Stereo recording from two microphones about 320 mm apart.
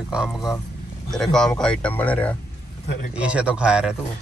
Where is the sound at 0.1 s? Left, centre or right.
Centre.